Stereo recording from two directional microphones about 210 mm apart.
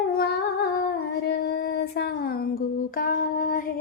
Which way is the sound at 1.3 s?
50° left (ahead or behind).